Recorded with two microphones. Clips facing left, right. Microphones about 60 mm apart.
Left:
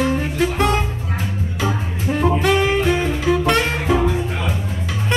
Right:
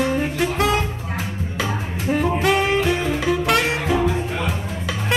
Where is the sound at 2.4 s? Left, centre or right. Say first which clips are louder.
Left 1 dB; centre.